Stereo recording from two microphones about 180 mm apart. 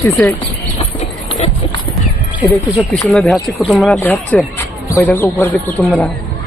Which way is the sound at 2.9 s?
Centre (ahead or behind).